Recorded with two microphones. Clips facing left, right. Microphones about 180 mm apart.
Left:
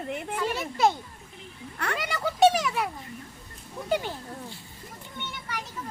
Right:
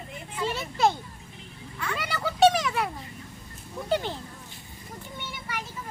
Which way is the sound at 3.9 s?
10° left (ahead or behind).